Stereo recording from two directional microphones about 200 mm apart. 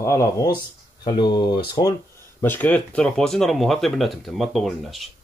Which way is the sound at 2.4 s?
10° left (ahead or behind).